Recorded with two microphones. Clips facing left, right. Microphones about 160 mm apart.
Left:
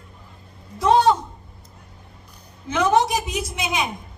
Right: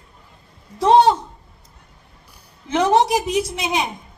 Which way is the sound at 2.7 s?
30° right (ahead or behind).